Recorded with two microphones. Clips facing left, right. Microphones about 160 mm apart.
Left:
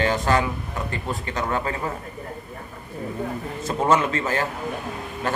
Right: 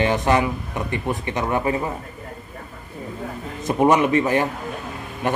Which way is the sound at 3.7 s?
15° right (ahead or behind).